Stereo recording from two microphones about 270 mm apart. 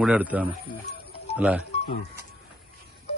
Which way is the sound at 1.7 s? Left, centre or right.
Left.